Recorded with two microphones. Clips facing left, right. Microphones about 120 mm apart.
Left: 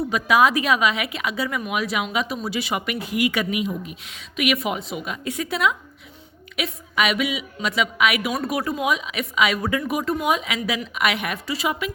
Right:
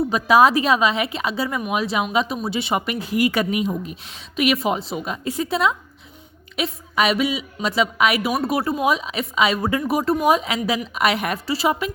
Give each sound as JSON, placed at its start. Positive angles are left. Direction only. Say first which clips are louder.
{"t": 0.1, "sound": "a woman's voice", "louder": "right 3 dB", "side_deg": -35}